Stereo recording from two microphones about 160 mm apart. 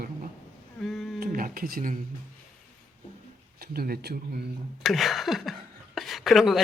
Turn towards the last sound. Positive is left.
turn(degrees=0)  # may be behind; listen again after turning